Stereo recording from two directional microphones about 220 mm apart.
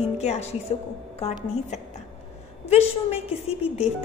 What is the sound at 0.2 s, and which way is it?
Speech, 30° left (ahead or behind).